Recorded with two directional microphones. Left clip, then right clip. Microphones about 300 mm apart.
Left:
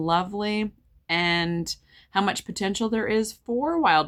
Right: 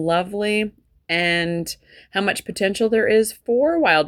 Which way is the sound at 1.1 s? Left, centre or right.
Left.